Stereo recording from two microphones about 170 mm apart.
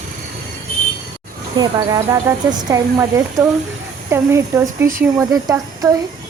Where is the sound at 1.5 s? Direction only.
20° right (ahead or behind).